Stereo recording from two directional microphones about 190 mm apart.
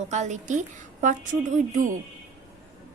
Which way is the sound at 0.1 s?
40° right (ahead or behind).